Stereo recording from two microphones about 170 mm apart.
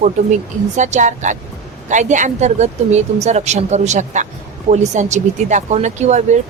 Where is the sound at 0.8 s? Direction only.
45° right (ahead or behind).